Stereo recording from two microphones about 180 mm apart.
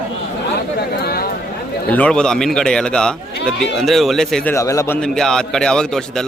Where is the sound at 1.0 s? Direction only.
60° left (ahead or behind).